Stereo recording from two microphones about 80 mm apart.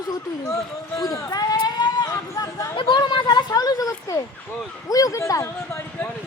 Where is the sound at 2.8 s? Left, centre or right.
Left.